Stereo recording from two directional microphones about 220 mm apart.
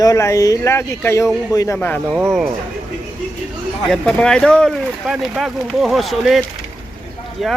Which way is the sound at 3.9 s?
5° left (ahead or behind).